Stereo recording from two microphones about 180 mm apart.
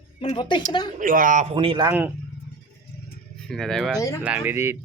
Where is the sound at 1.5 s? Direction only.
30° right (ahead or behind).